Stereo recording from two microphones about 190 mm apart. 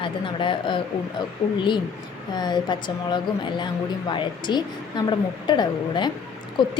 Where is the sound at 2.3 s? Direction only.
20° left (ahead or behind).